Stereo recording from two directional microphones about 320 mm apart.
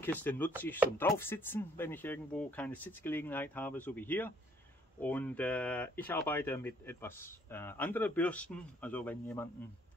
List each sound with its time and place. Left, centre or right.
0.0 s speech: centre